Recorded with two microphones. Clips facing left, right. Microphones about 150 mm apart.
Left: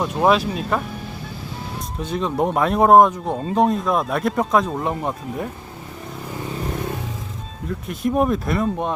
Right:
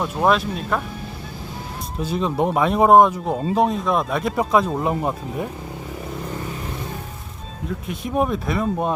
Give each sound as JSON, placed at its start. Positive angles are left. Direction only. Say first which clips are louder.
{"t": 0.0, "sound": "speech", "louder": "left 1 dB", "side_deg": 0}
{"t": 2.0, "sound": "speech", "louder": "even", "side_deg": -5}
{"t": 7.9, "sound": "speech", "louder": "left 3 dB", "side_deg": 0}